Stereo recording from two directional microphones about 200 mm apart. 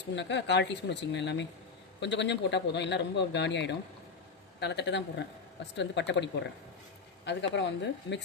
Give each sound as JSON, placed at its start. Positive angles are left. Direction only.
{"t": 0.2, "sound": "speech", "side_deg": 60}